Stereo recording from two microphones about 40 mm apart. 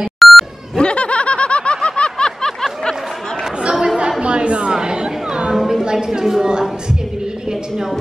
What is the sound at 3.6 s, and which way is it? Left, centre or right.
Chatter, centre.